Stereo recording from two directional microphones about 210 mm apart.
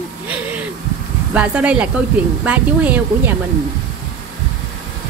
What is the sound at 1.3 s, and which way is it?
Speech, 5° right (ahead or behind).